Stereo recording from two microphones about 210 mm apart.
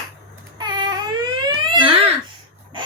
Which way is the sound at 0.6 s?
20° right (ahead or behind).